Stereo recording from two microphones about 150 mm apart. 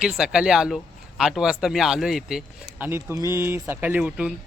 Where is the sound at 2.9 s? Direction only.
15° right (ahead or behind).